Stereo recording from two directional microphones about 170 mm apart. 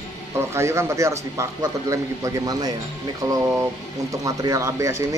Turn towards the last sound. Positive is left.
turn(degrees=-15)  # may be behind; listen again after turning